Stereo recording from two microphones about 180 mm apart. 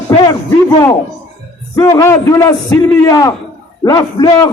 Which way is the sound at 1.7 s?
20° left (ahead or behind).